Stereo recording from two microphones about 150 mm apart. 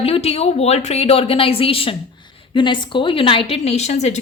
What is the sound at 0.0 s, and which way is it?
A woman's voice, 40° left (ahead or behind).